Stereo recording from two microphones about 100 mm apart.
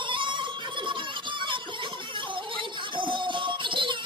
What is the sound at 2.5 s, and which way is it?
Music, 55° right (ahead or behind).